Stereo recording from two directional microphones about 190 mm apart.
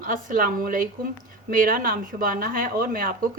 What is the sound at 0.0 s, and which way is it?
Speech, 45° right (ahead or behind).